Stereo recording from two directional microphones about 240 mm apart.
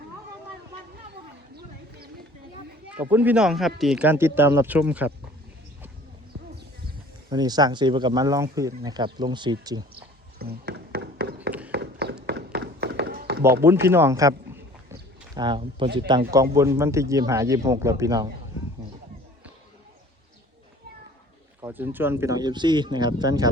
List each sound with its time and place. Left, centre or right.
2.9 s speech: centre
7.3 s speech: centre
10.3 s a sound: right
12.2 s tap: right
13.8 s a sound: centre
15.4 s speech: centre
21.6 s speech: centre